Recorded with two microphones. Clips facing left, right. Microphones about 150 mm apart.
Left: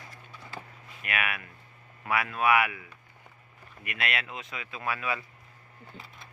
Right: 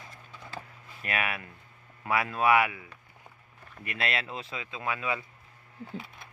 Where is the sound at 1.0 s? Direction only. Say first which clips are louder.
Right 1 dB; 30° right (ahead or behind).